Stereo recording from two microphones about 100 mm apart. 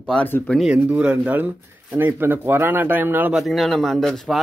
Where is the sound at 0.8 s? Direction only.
10° right (ahead or behind).